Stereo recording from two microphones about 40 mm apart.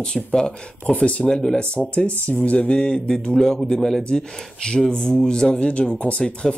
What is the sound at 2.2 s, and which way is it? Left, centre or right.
Speech, left.